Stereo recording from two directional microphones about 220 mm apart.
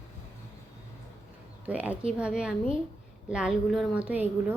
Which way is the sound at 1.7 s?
5° right (ahead or behind).